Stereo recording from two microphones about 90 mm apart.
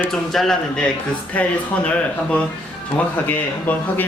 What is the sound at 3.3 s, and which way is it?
Speech, 20° left (ahead or behind).